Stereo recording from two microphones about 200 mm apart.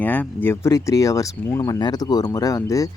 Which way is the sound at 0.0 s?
10° left (ahead or behind).